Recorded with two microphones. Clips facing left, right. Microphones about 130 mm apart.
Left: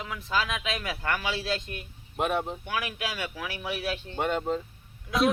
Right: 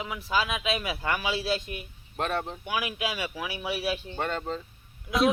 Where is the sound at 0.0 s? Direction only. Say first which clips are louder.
Right 1 dB; 10° right (ahead or behind).